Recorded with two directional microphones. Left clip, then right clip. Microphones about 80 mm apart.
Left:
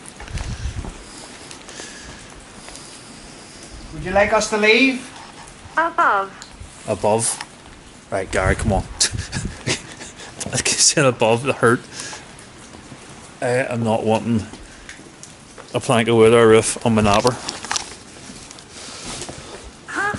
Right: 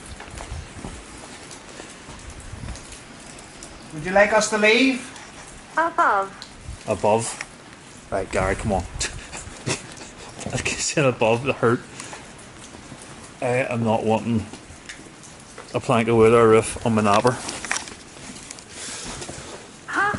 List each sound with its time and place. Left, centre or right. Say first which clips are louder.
4.1 s speech: left 1 dB; centre
5.8 s speech: left 2 dB; centre
8.6 s a sound: left 4 dB; left
9.7 s dog: left 4 dB; centre
10.4 s speech: left 7 dB; left
13.4 s speech: left 2 dB; centre
14.0 s speech: left 3 dB; left
15.7 s speech: left 3 dB; left
17.2 s speech: left 2 dB; centre
19.9 s dog: right 1 dB; right